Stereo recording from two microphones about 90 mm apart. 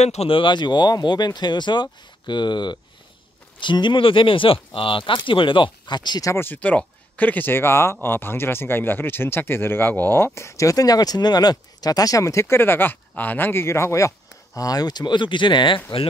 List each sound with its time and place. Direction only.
0.3 s speech: 65° left (ahead or behind)
6.2 s speech: 25° left (ahead or behind); by 16.1 s 75° left (ahead or behind)